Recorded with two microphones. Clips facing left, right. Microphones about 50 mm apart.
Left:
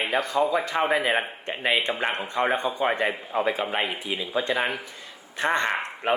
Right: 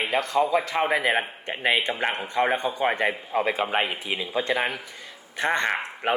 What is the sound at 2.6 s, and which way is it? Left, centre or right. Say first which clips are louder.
Speech: even; centre.